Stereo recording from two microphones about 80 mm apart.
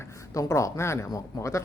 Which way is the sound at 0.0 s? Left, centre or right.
Left.